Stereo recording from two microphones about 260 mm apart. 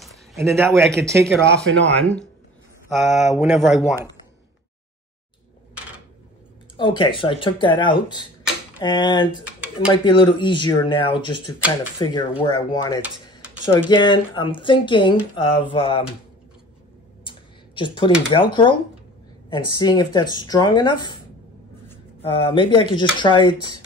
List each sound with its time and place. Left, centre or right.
0.0 s a sound: centre
0.7 s speech: centre
0.9 s speech: centre
1.4 s speech: right
2.9 s speech: centre
6.8 s speech: centre
9.6 s a sound: centre
10.0 s speech: centre
17.2 s a sound: centre
18.3 s speech: centre
19.8 s speech: centre
22.2 s speech: centre